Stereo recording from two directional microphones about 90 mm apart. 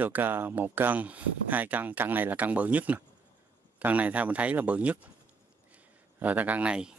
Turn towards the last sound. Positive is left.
turn(degrees=-10)  # may be behind; listen again after turning